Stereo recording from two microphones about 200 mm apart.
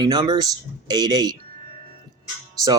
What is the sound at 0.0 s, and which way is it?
Speech, 20° right (ahead or behind).